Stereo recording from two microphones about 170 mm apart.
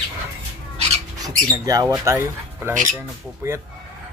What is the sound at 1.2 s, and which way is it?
Speech, 20° right (ahead or behind).